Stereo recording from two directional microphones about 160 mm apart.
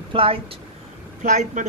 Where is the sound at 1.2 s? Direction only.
50° right (ahead or behind).